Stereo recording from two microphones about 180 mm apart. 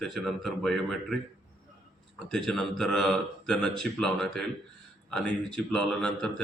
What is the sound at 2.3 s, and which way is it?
Speech, 5° left (ahead or behind).